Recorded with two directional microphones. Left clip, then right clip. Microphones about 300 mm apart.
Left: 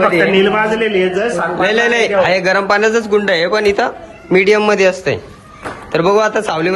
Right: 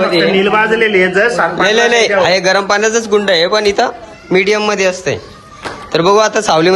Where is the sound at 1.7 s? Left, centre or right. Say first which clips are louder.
Right 2 dB; centre.